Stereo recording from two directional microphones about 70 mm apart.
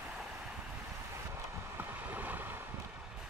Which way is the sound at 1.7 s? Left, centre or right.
Right.